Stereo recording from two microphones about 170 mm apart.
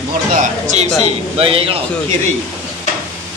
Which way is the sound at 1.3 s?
35° right (ahead or behind).